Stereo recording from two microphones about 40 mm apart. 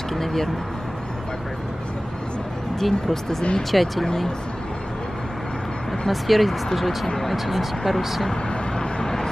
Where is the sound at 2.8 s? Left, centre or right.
Centre.